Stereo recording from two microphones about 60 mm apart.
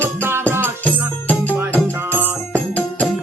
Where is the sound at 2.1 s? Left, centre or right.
Right.